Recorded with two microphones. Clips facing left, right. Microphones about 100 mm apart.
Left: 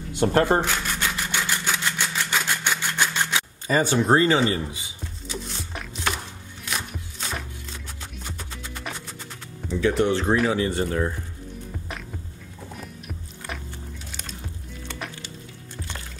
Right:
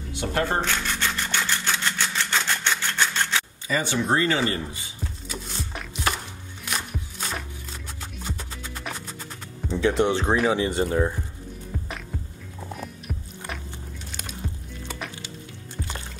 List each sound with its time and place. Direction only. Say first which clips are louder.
0.1 s speech: left 6 dB; 45° left (ahead or behind)
0.5 s a sound: left 3 dB; 10° left (ahead or behind)
3.6 s speech: left 6 dB; 40° left (ahead or behind)
5.3 s music: left 2 dB; centre (ahead or behind)
9.7 s speech: even; 25° right (ahead or behind)
14.1 s music: right 2 dB; 5° right (ahead or behind)